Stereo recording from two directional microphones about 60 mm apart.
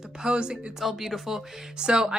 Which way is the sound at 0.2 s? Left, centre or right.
Centre.